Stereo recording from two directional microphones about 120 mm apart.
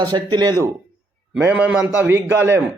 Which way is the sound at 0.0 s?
35° right (ahead or behind).